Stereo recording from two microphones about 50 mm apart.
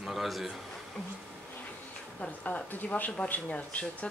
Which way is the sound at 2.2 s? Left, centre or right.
Left.